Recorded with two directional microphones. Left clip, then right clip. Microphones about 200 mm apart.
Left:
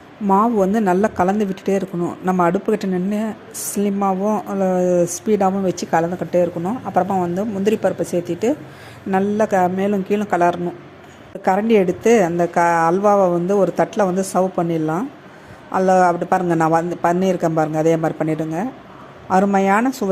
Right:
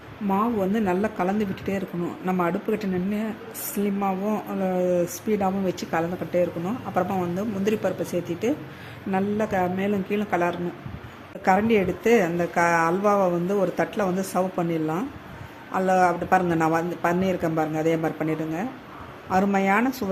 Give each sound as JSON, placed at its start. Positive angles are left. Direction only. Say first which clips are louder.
{"t": 0.3, "sound": "a woman's voice", "louder": "left 9 dB", "side_deg": 25}